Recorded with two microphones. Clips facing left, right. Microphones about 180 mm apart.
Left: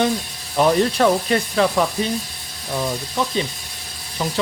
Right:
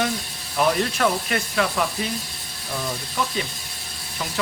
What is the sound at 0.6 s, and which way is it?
Speech, 30° left (ahead or behind).